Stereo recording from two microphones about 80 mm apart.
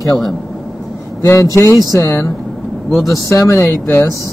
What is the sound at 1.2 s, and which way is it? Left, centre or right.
Speech, left.